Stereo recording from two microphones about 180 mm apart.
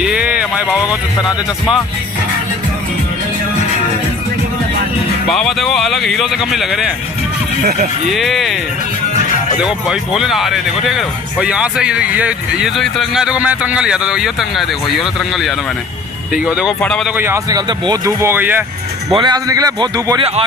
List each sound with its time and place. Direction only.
0.0 s a sound: 5° right (ahead or behind)
0.7 s speech: 20° left (ahead or behind)
5.3 s speech: centre (ahead or behind)
7.6 s speech: 50° right (ahead or behind)
8.1 s speech: centre (ahead or behind)
9.6 s speech: 5° right (ahead or behind)
17.2 s speech: 15° right (ahead or behind)
19.1 s a man's voice: 25° right (ahead or behind)